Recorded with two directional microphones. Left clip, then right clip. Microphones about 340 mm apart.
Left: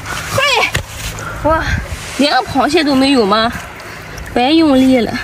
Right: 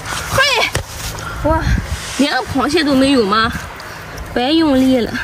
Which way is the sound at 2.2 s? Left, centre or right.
Centre.